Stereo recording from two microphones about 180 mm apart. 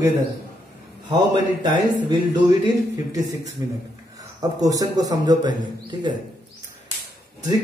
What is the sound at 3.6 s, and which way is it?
A man's voice, 15° right (ahead or behind).